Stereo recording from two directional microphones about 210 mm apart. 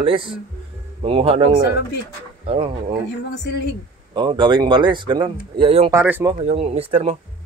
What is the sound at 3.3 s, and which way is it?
Speech, 55° left (ahead or behind).